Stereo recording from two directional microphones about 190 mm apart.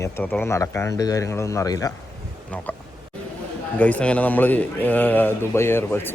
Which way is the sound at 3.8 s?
5° left (ahead or behind).